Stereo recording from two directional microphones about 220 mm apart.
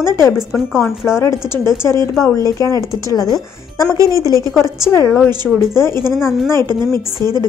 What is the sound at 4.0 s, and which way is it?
Speech, 15° right (ahead or behind).